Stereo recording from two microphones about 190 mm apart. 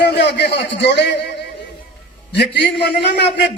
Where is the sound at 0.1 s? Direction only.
65° left (ahead or behind).